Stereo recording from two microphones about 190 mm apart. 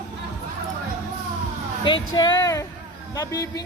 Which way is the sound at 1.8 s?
25° left (ahead or behind).